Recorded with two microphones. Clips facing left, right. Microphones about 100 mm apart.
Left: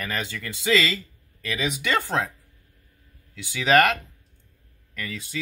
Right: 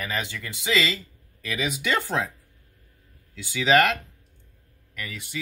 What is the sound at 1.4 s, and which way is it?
Speech, 5° right (ahead or behind).